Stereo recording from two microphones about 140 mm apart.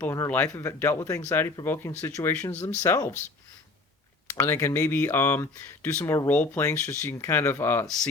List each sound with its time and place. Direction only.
0.0 s speech: 15° left (ahead or behind)
4.3 s speech: 15° left (ahead or behind)